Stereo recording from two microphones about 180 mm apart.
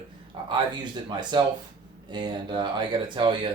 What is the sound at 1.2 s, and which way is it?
Speech, 25° right (ahead or behind).